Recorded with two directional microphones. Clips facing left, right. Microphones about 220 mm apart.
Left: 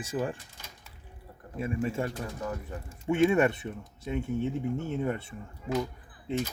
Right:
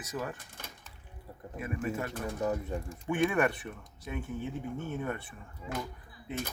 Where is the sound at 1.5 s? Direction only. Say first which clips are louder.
Left 4 dB; 30° left (ahead or behind).